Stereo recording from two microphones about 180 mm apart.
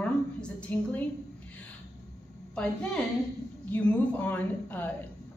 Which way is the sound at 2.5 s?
5° left (ahead or behind).